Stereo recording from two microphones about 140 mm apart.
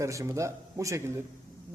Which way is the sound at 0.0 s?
20° right (ahead or behind).